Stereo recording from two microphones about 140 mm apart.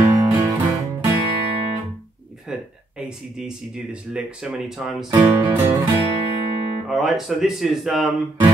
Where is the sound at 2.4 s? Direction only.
5° right (ahead or behind).